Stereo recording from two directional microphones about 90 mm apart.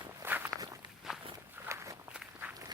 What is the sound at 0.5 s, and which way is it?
Walk, 40° right (ahead or behind).